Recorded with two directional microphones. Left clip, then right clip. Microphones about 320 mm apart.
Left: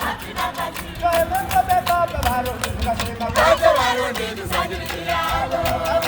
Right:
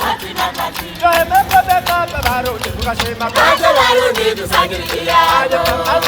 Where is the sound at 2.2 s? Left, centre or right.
Centre.